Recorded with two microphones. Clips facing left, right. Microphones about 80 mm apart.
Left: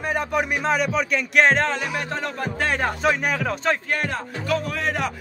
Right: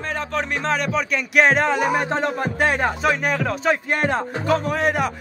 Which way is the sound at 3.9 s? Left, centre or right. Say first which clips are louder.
Right 5 dB; right.